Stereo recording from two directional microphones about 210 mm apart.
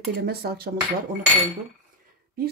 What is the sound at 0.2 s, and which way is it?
Speech, 50° right (ahead or behind).